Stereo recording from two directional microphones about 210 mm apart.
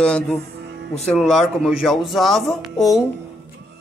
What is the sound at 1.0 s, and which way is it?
Speech, centre (ahead or behind).